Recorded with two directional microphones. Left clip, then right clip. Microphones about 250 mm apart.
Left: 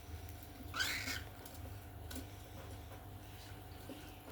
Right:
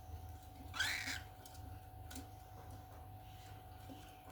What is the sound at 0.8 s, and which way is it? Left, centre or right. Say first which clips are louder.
Cat: even; centre.